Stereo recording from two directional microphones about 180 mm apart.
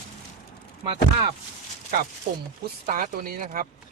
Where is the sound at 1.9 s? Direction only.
60° right (ahead or behind).